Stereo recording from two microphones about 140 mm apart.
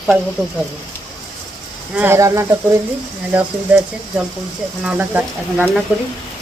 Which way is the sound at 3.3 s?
10° right (ahead or behind).